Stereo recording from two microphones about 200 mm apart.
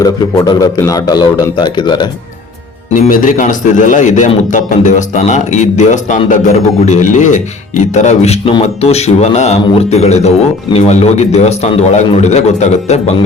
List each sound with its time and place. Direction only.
0.0 s a man's voice: 20° left (ahead or behind)
2.9 s speech: 45° left (ahead or behind)